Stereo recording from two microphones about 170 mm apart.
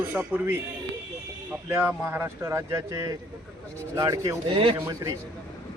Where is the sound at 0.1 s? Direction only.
10° right (ahead or behind).